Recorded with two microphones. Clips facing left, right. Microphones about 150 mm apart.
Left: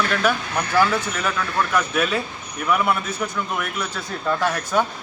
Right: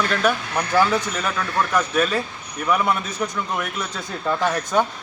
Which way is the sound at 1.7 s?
10° left (ahead or behind).